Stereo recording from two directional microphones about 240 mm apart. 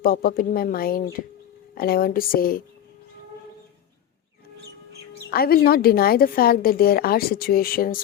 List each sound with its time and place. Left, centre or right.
0.0 s a woman's voice: left
5.3 s a woman's voice: left